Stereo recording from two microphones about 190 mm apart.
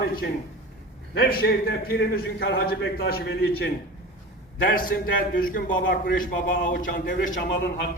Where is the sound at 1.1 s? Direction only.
50° left (ahead or behind).